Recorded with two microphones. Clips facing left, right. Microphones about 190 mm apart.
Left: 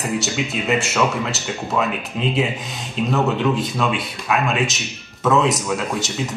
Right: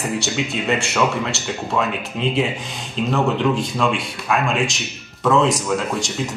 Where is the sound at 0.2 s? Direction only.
Centre (ahead or behind).